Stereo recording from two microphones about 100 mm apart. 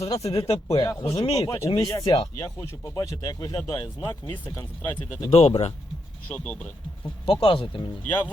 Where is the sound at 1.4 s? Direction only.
30° left (ahead or behind).